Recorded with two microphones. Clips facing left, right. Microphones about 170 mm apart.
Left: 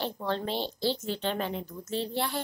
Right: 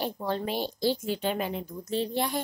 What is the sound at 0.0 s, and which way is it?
A woman's voice, 10° right (ahead or behind).